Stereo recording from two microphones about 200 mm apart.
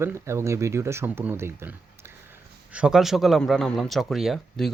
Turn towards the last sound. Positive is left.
turn(degrees=0)  # may be behind; listen again after turning